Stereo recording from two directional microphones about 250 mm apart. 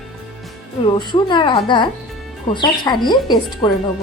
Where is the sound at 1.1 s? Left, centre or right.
Centre.